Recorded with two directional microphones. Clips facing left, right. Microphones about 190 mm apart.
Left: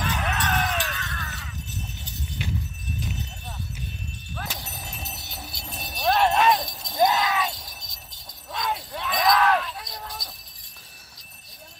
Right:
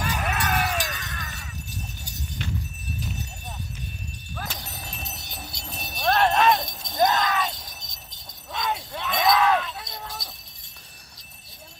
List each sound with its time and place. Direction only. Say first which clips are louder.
0.0 s music: even; 10° right (ahead or behind)
4.4 s horse: even; 5° left (ahead or behind)
8.5 s a sound: even; centre (ahead or behind)